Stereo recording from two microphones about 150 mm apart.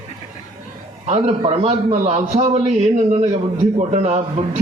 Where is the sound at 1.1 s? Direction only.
45° right (ahead or behind).